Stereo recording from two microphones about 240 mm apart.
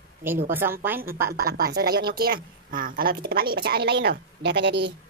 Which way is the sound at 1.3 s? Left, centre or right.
Right.